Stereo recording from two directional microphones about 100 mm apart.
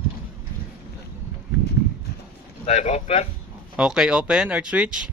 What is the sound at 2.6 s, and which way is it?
Speech, 90° left.